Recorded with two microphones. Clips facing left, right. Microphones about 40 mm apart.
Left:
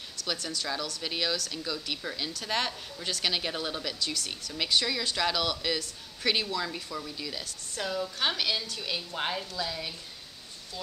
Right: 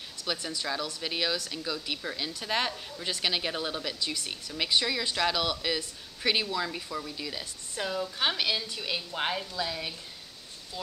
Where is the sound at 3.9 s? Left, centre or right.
Centre.